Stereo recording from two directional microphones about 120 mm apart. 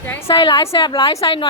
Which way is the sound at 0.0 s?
20° left (ahead or behind).